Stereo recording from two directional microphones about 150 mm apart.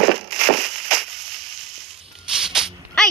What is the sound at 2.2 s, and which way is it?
Dog, 5° right (ahead or behind).